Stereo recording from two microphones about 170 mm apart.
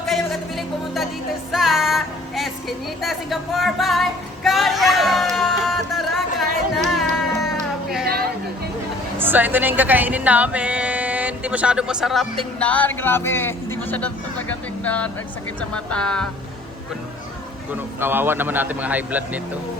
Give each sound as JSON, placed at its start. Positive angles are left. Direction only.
{"t": 0.1, "sound": "music", "side_deg": 0}
{"t": 1.5, "sound": "child singing", "side_deg": 0}
{"t": 6.7, "sound": "music", "side_deg": 0}
{"t": 8.0, "sound": "a sound", "side_deg": -65}
{"t": 9.1, "sound": "speech", "side_deg": -10}
{"t": 17.7, "sound": "a man's voice", "side_deg": -10}